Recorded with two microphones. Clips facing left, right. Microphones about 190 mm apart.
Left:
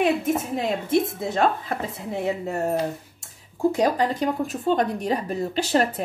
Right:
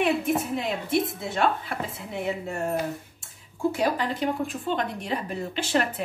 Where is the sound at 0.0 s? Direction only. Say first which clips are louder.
Left 2 dB; 40° left (ahead or behind).